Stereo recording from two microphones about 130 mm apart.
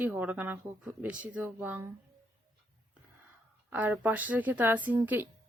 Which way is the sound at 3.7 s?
15° right (ahead or behind).